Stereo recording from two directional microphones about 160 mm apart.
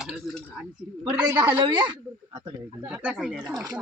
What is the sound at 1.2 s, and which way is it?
Speech, 25° right (ahead or behind).